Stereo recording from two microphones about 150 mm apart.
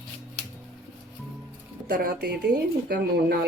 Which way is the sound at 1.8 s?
80° right.